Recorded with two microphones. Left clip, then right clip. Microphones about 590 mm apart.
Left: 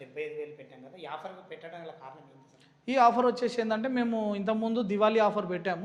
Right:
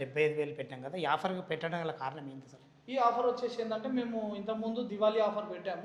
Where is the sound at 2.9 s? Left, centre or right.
Left.